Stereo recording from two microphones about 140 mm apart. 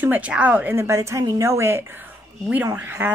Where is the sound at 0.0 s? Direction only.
10° right (ahead or behind).